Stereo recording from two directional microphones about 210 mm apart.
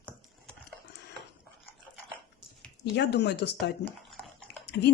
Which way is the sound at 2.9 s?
55° left (ahead or behind).